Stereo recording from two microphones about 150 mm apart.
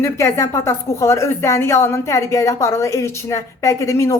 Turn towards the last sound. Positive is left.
turn(degrees=20)  # may be behind; listen again after turning